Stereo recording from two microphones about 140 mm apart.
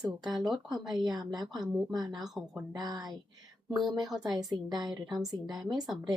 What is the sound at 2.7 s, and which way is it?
Speech, 30° right (ahead or behind).